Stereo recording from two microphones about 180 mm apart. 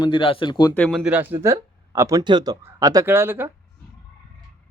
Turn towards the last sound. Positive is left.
turn(degrees=-10)  # may be behind; listen again after turning